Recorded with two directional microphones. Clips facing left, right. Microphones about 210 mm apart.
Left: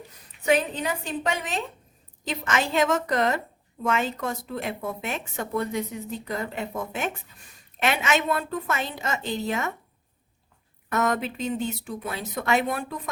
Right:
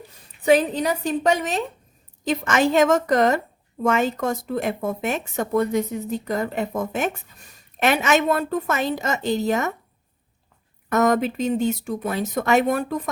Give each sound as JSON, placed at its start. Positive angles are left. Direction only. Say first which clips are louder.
{"t": 0.4, "sound": "a woman's voice", "louder": "right 6 dB", "side_deg": -35}
{"t": 10.8, "sound": "speech", "louder": "right 6 dB", "side_deg": -40}